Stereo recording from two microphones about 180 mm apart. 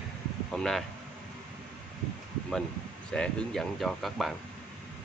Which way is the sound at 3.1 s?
5° left (ahead or behind).